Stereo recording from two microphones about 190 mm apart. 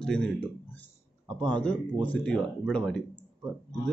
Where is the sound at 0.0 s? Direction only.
5° left (ahead or behind).